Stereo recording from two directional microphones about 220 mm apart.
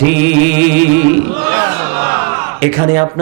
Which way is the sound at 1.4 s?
15° right (ahead or behind).